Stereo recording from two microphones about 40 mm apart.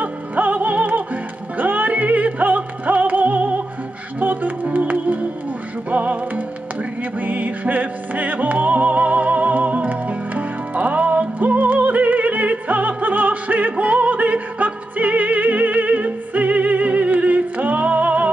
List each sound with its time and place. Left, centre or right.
0.0 s music: right